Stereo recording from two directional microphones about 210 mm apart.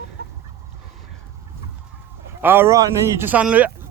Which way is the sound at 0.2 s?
50° right (ahead or behind).